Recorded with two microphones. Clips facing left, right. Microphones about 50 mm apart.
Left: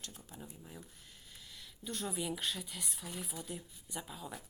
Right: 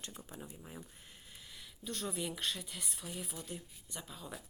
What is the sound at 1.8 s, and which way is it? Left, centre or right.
Speech, centre.